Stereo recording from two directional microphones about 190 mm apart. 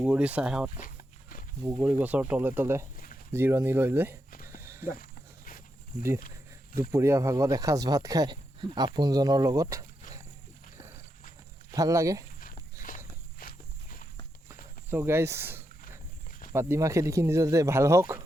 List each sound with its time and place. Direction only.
0.0 s speech: 5° right (ahead or behind)
1.8 s speech: 5° right (ahead or behind)
4.6 s a sound: 15° right (ahead or behind)
6.9 s speech: 15° right (ahead or behind)
11.7 s speech: 15° right (ahead or behind)
12.4 s walk: 50° left (ahead or behind)
14.8 s speech: 10° right (ahead or behind)